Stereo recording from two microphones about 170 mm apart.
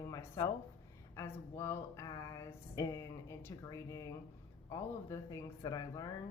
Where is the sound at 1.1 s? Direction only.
15° left (ahead or behind).